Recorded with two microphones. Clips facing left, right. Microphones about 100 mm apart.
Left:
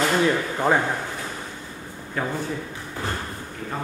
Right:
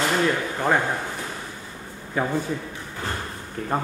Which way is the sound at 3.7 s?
45° right (ahead or behind).